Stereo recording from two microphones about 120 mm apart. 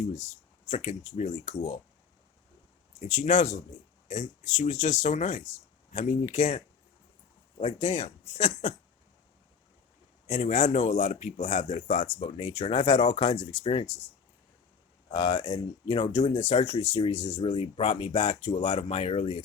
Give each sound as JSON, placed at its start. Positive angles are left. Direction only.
{"t": 0.7, "sound": "speech", "side_deg": 70}
{"t": 3.0, "sound": "speech", "side_deg": 90}
{"t": 7.6, "sound": "speech", "side_deg": 60}
{"t": 10.2, "sound": "speech", "side_deg": 90}
{"t": 12.2, "sound": "speech", "side_deg": 55}
{"t": 15.1, "sound": "speech", "side_deg": 40}